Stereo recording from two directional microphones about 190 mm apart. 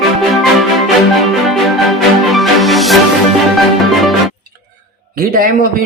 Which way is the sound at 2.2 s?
Centre (ahead or behind).